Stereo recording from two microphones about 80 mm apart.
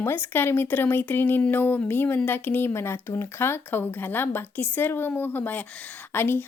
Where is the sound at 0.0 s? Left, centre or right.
Left.